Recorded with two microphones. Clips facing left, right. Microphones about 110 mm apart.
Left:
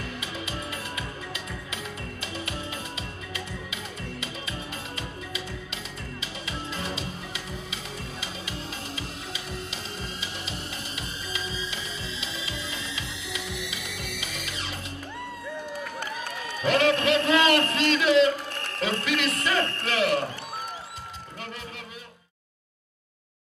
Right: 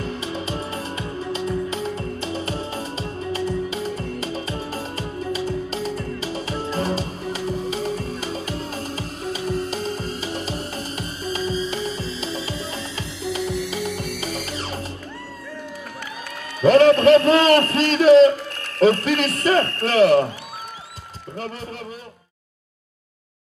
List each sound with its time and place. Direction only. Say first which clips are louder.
0.0 s music: right 8 dB; 35° right (ahead or behind)
16.6 s a man's voice: right 10 dB; 40° right (ahead or behind)